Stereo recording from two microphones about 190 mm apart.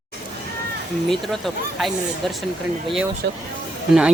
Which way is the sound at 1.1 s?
Centre (ahead or behind).